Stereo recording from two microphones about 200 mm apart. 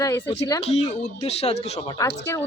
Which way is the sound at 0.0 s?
15° left (ahead or behind).